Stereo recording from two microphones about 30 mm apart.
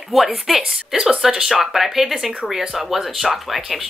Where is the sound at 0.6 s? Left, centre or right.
Right.